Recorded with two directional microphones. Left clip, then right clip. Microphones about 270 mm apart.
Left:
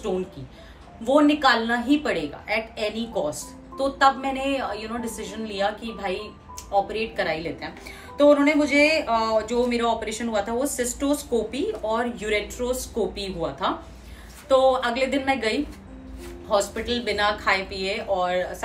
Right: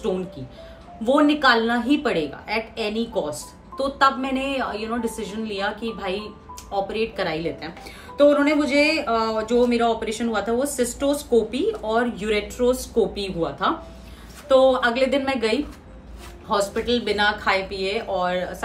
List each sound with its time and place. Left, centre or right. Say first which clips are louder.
1.1 s a woman's voice: right 1 dB; centre